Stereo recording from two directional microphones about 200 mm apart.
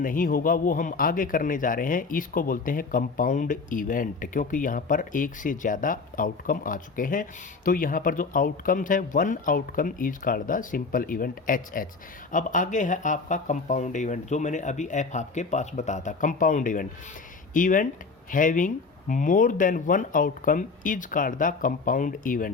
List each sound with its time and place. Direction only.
0.0 s speech: 45° left (ahead or behind)